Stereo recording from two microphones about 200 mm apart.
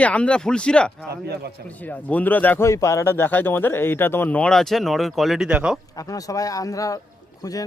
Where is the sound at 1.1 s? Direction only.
55° right (ahead or behind).